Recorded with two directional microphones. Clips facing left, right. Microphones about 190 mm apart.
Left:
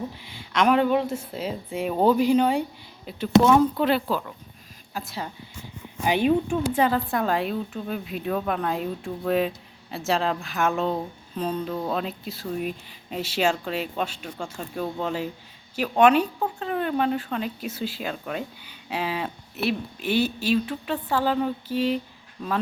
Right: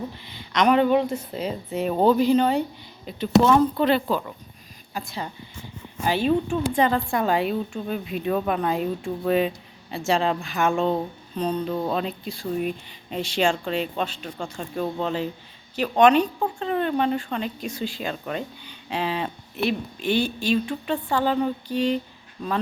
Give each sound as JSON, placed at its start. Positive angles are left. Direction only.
{"t": 0.2, "sound": "speech", "side_deg": 10}
{"t": 6.1, "sound": "speech", "side_deg": 15}